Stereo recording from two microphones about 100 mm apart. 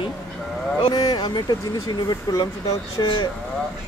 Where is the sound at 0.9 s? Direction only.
40° left (ahead or behind).